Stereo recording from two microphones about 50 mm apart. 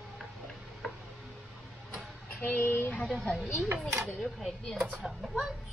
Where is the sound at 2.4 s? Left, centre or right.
Left.